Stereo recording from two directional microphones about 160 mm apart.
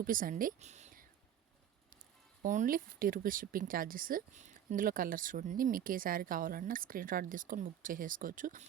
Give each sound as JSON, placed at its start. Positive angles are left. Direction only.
{"t": 0.0, "sound": "speech", "side_deg": -60}
{"t": 2.4, "sound": "speech", "side_deg": -55}